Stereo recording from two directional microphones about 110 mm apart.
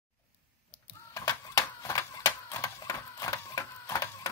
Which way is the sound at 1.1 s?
30° left (ahead or behind).